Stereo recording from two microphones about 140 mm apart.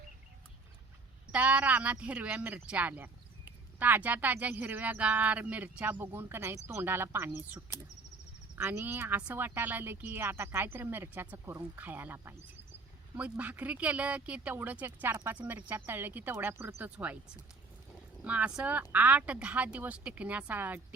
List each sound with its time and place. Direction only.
1.3 s speech: 10° right (ahead or behind)
18.2 s speech: 10° right (ahead or behind)